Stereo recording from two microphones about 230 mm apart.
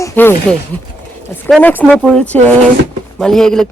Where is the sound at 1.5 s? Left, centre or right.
Centre.